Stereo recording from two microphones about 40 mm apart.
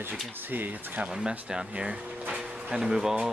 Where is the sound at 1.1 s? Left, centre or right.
Centre.